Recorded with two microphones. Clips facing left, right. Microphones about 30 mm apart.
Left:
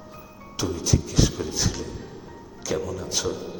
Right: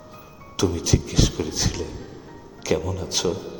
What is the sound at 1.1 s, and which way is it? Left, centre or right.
Music, right.